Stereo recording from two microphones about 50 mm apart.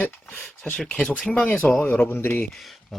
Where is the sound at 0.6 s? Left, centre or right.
Centre.